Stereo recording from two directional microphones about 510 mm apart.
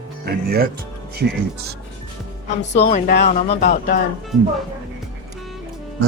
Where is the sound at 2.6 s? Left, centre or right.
Centre.